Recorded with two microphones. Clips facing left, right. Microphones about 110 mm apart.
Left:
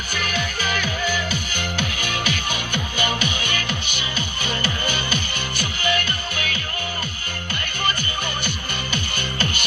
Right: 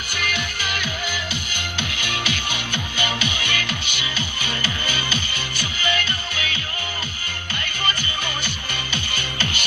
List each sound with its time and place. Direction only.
0.1 s music: 40° left (ahead or behind)
8.4 s music: 50° left (ahead or behind)